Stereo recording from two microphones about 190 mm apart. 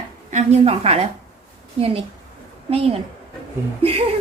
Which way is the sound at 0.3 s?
35° right (ahead or behind).